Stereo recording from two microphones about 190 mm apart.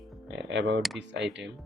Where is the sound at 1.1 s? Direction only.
65° right (ahead or behind).